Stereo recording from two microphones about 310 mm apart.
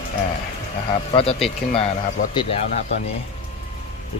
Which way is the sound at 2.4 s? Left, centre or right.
Centre.